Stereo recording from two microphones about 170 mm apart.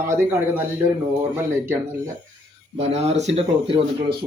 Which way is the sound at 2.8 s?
40° right (ahead or behind).